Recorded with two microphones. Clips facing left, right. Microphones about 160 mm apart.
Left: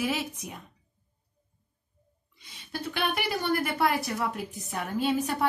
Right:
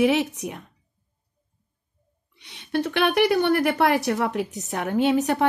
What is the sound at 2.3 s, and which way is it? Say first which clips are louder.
Speech: right 12 dB; 70° right (ahead or behind).